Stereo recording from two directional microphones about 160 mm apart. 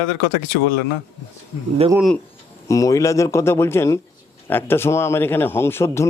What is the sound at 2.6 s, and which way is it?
Speech, 20° left (ahead or behind).